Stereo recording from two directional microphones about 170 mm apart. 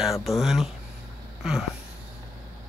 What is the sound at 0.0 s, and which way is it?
Speech, centre (ahead or behind).